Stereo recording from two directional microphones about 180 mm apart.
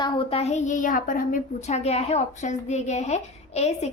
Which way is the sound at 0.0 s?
30° left (ahead or behind).